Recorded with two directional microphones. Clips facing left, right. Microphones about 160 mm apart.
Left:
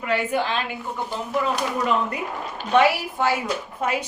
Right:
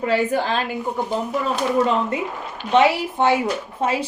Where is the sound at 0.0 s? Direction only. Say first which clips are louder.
Right 3 dB; 35° right (ahead or behind).